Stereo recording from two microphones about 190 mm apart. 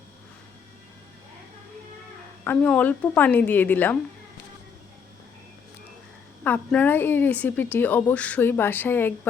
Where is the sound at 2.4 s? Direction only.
5° left (ahead or behind).